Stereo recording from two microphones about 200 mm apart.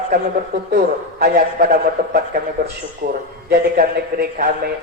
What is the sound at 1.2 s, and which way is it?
A man's voice, 50° right (ahead or behind).